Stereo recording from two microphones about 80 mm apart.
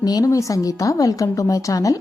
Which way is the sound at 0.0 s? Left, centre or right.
Left.